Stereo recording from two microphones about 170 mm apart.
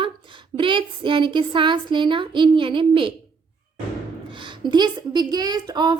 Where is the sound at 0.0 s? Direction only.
30° right (ahead or behind).